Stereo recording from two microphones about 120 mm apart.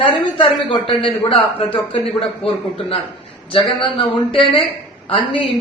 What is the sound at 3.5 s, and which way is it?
Speech, 50° left (ahead or behind).